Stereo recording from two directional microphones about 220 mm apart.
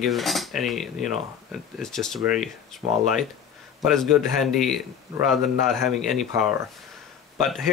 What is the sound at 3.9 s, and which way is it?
Speech, centre (ahead or behind).